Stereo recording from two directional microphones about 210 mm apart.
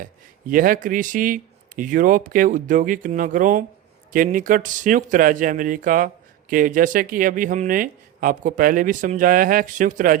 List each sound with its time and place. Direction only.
0.0 s speech: 40° right (ahead or behind)